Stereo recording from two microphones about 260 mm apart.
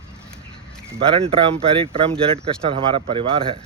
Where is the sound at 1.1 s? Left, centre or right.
Right.